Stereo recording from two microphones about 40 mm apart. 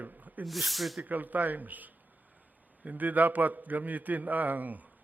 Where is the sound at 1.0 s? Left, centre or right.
Right.